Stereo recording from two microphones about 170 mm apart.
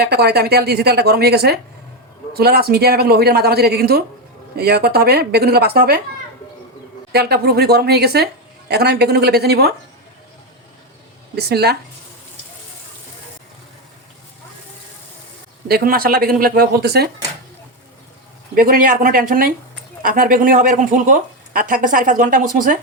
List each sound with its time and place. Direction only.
0.0 s a man's voice: 70° right (ahead or behind)
7.1 s speech: 70° right (ahead or behind)
11.3 s speech: 70° right (ahead or behind)
15.7 s a man's voice: 60° right (ahead or behind)
18.5 s a man's voice: 55° right (ahead or behind)